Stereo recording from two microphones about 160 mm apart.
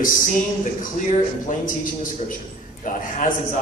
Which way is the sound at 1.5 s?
55° left (ahead or behind).